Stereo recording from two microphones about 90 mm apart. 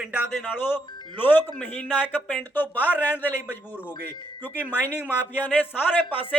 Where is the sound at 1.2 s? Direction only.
20° left (ahead or behind).